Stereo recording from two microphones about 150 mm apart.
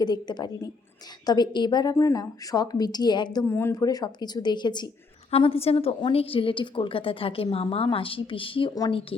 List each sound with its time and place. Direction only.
0.0 s a woman's voice: 25° left (ahead or behind)
3.4 s a woman's voice: 15° left (ahead or behind); by 9.1 s 40° left (ahead or behind)